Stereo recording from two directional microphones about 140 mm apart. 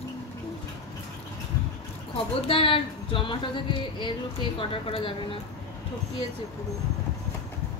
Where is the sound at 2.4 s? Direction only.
40° left (ahead or behind).